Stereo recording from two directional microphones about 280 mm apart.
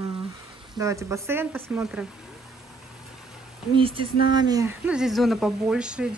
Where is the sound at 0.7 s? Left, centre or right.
Centre.